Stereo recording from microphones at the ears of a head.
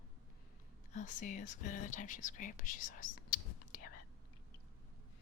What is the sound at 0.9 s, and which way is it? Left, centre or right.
Speech, left.